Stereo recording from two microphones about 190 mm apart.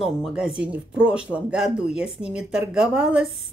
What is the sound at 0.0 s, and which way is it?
Speech, 5° right (ahead or behind).